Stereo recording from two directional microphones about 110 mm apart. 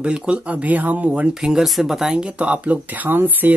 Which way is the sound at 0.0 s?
10° right (ahead or behind).